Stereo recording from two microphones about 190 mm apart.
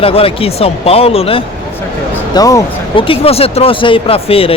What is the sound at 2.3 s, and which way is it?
Speech, 20° left (ahead or behind).